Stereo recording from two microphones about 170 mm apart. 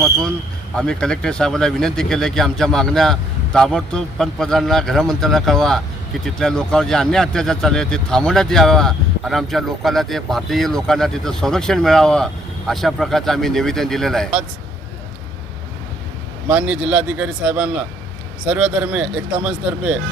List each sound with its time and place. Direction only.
0.8 s a man's voice: 5° left (ahead or behind)
16.5 s speech: 5° right (ahead or behind)